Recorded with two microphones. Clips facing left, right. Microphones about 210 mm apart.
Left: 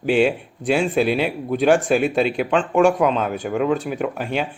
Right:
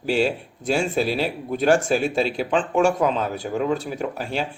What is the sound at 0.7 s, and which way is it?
Speech, centre (ahead or behind).